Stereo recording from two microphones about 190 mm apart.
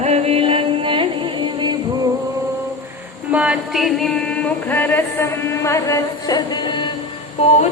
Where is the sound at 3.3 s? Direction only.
5° right (ahead or behind); by 6.9 s 25° left (ahead or behind).